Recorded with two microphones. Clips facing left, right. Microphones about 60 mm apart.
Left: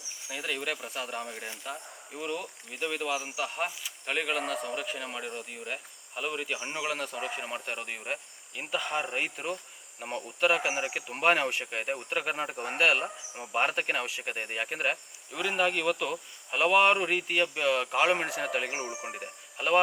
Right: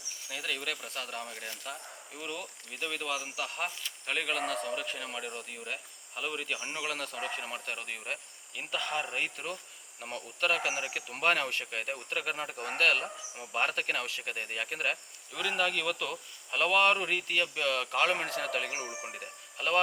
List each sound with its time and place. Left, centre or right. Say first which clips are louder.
0.3 s speech: left 3 dB; centre